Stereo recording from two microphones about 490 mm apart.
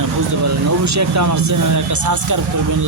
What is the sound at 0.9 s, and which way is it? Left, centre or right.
Speech, right.